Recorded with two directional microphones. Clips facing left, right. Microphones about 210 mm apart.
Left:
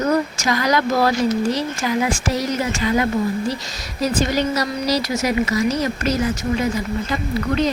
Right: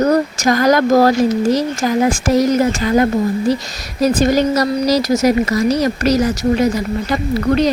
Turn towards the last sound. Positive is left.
turn(degrees=-40)  # may be behind; listen again after turning